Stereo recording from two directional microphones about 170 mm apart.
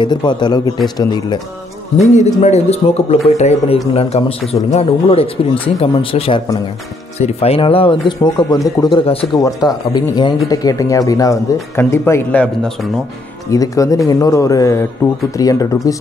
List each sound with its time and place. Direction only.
0.0 s speech: 25° left (ahead or behind)
2.0 s a man's voice: 40° left (ahead or behind)
9.4 s speech: 20° left (ahead or behind)
13.5 s speech: 20° left (ahead or behind)